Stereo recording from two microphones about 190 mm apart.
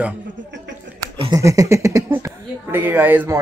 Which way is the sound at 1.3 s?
15° right (ahead or behind).